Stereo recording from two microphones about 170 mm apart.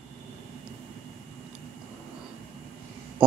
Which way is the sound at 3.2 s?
5° right (ahead or behind).